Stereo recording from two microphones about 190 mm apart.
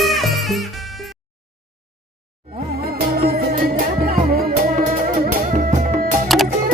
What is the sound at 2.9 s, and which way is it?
Music, 55° right (ahead or behind).